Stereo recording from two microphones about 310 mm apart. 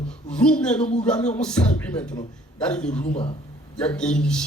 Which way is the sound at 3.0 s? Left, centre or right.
Centre.